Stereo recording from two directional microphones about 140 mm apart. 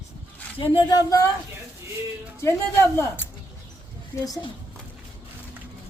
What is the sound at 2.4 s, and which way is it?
Speech, 20° left (ahead or behind).